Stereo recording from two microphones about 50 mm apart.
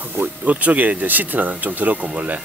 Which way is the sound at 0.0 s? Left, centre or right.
Right.